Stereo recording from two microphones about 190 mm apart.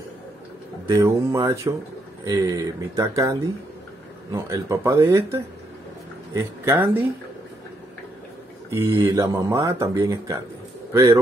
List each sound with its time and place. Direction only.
0.8 s speech: 15° right (ahead or behind)
9.0 s speech: 20° right (ahead or behind)